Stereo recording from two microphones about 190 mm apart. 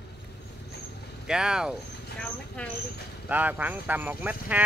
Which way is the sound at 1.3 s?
5° right (ahead or behind).